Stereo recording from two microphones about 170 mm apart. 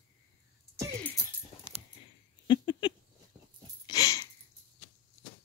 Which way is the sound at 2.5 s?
30° left (ahead or behind).